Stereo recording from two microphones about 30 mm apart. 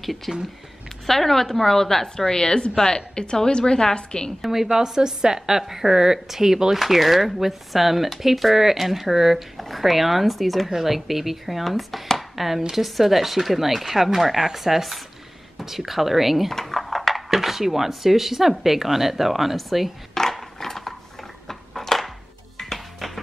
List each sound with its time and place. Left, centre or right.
0.0 s a woman's voice: centre; by 4.3 s left
4.4 s speech: centre
4.6 s a woman's voice: centre
5.6 s speech: centre
6.8 s speech: centre
9.6 s speech: centre
11.6 s a woman's voice: centre
12.2 s a sound: centre
12.7 s speech: centre
16.4 s speech: centre
20.2 s a sound: centre
22.6 s music: centre